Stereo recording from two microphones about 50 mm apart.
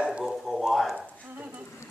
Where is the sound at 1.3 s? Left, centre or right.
Right.